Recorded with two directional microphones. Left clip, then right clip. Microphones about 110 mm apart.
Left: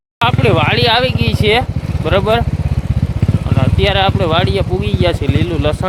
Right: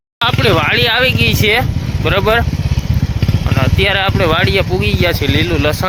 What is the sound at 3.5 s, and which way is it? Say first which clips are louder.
Speech: right 1 dB; 20° left (ahead or behind).